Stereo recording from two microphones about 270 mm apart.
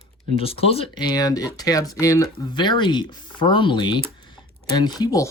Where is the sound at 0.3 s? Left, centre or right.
Left.